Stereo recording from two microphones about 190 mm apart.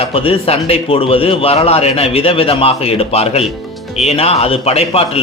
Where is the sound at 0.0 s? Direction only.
30° left (ahead or behind).